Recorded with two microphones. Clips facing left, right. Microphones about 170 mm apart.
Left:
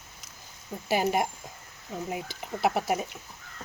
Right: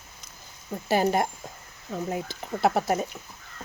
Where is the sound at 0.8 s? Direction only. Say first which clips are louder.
Right 3 dB; 10° left (ahead or behind).